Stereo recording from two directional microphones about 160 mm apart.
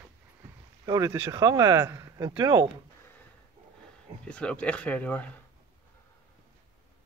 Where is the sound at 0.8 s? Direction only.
20° right (ahead or behind).